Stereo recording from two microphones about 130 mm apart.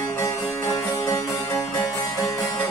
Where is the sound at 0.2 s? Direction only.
25° left (ahead or behind).